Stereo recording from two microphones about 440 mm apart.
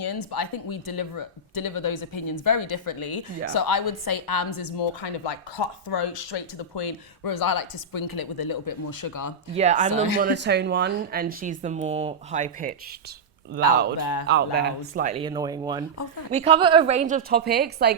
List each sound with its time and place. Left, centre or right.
0.0 s a woman's voice: left
9.5 s a woman's voice: centre
14.0 s speech: left
14.3 s a woman's voice: right